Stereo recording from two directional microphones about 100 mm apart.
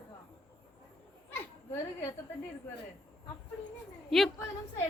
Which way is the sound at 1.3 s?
25° left (ahead or behind).